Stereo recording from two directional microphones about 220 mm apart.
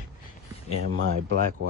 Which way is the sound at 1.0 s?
60° right (ahead or behind).